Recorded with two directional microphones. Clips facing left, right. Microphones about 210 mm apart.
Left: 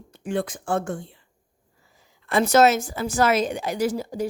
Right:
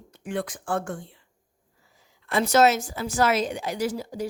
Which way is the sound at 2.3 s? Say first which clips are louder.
Left 2 dB; 50° left (ahead or behind).